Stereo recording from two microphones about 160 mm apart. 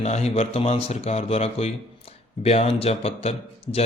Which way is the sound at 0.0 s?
45° left (ahead or behind).